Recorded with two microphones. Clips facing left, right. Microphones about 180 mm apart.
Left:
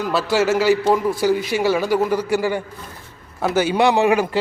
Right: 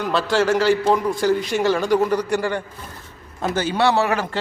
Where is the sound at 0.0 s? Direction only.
5° left (ahead or behind).